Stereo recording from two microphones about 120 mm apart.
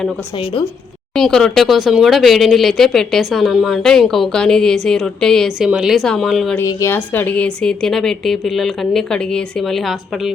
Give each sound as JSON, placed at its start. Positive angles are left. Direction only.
{"t": 1.1, "sound": "speech", "side_deg": 5}
{"t": 5.6, "sound": "speech", "side_deg": -5}
{"t": 6.6, "sound": "speech", "side_deg": 25}